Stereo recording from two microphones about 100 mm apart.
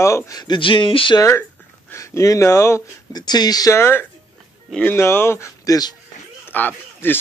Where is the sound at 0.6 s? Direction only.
55° left (ahead or behind).